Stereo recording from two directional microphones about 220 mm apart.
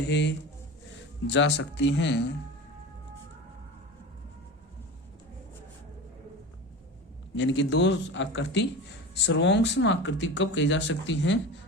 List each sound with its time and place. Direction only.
0.1 s a man's voice: 55° left (ahead or behind)
7.3 s speech: 55° left (ahead or behind)